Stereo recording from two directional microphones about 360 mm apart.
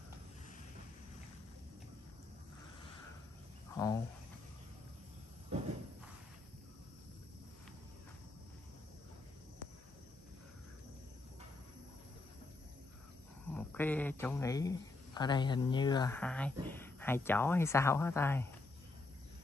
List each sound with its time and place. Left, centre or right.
3.7 s cricket: centre
5.5 s a sound: centre
13.5 s speech: centre